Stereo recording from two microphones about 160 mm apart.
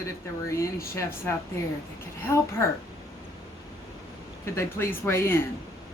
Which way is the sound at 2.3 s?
15° left (ahead or behind).